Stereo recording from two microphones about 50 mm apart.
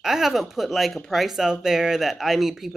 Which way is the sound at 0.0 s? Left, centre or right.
Centre.